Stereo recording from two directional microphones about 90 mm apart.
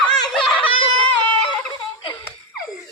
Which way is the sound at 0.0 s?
10° left (ahead or behind).